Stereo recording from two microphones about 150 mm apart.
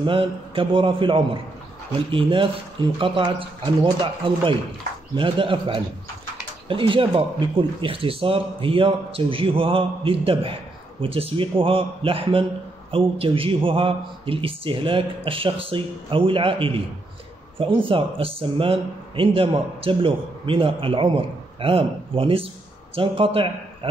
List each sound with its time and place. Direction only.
0.0 s a man's voice: 35° right (ahead or behind)